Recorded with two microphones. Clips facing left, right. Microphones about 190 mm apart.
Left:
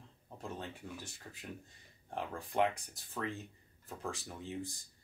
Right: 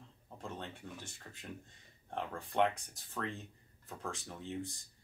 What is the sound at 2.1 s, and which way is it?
Speech, 5° left (ahead or behind).